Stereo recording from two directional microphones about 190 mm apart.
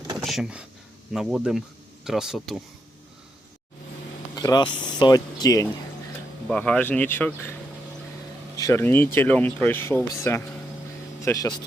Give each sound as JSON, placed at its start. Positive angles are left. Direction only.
{"t": 0.2, "sound": "speech", "side_deg": 0}
{"t": 4.4, "sound": "speech", "side_deg": 20}
{"t": 6.5, "sound": "speech", "side_deg": 5}
{"t": 8.5, "sound": "speech", "side_deg": 15}